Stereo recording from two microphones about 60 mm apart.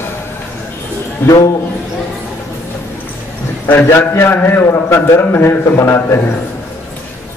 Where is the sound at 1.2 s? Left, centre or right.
Left.